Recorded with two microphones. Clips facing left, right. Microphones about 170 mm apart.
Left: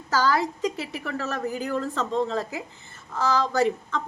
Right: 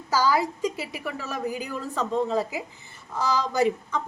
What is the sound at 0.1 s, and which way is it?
A woman's voice, 10° right (ahead or behind).